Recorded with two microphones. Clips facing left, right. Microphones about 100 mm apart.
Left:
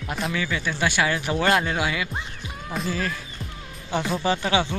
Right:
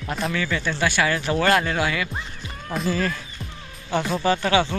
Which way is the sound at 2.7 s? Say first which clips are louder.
Right 3 dB; centre (ahead or behind).